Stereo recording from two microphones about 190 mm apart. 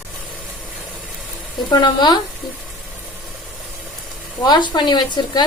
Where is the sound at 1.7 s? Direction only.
25° left (ahead or behind).